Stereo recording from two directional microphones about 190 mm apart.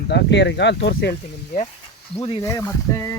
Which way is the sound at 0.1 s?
65° left (ahead or behind).